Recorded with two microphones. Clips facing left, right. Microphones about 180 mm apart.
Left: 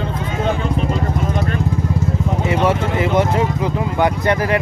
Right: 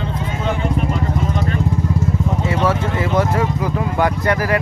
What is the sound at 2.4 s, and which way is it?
Speech, 20° left (ahead or behind).